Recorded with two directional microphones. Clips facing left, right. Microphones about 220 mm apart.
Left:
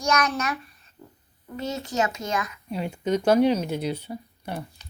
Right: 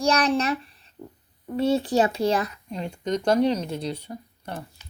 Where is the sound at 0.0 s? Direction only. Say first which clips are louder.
Right 3 dB; 30° right (ahead or behind).